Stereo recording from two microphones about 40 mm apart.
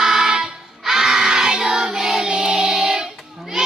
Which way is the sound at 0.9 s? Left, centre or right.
Centre.